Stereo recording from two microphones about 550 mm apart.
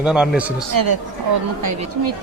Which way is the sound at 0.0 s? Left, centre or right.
Centre.